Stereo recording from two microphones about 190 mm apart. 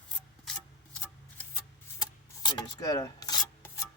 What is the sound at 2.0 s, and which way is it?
Rub, 20° left (ahead or behind).